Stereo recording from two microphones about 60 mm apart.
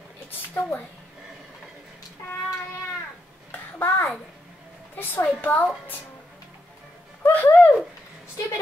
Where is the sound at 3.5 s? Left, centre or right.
Left.